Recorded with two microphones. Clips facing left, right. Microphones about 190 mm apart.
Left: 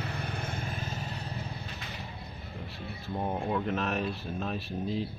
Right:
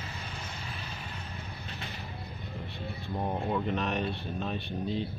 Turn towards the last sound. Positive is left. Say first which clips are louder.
# even
turn(degrees=0)  # may be behind; listen again after turning